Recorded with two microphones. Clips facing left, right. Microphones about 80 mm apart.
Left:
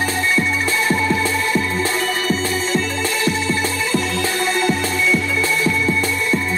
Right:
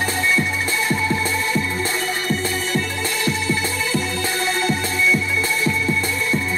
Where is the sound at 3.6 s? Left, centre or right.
Left.